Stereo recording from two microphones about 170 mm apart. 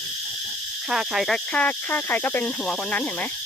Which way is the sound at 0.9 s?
Centre (ahead or behind).